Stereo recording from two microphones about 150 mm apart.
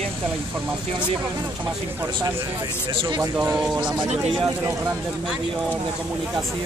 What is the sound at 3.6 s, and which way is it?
Speech, 5° right (ahead or behind).